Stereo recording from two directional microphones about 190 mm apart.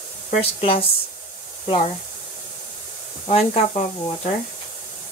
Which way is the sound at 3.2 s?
35° left (ahead or behind).